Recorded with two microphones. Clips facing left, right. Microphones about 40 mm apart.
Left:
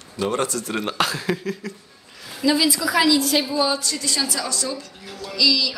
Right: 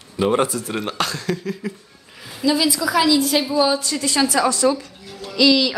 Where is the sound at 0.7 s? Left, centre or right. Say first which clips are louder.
Left 2 dB; centre.